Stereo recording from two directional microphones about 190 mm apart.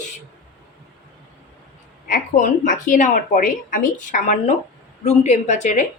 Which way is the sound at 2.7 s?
45° left (ahead or behind).